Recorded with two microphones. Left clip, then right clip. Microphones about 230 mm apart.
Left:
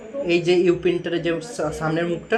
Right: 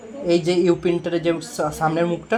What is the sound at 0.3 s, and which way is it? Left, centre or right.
Speech, right.